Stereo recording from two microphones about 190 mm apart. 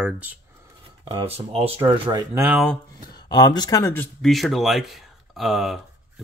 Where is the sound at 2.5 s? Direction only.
Centre (ahead or behind).